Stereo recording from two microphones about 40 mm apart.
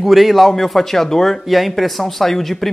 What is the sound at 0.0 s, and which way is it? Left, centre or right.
Speech, centre.